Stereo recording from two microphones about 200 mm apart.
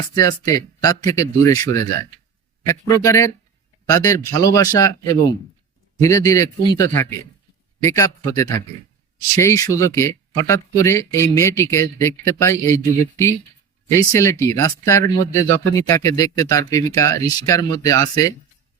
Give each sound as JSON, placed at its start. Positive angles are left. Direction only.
{"t": 0.1, "sound": "speech", "side_deg": 20}